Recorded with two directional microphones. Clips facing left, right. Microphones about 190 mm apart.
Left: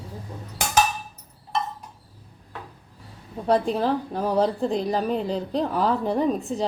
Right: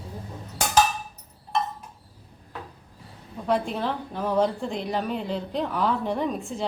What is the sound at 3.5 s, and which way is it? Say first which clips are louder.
A woman's voice: left 4 dB; 35° left (ahead or behind).